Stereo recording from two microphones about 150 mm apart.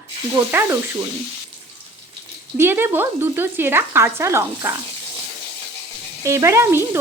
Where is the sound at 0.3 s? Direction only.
15° right (ahead or behind).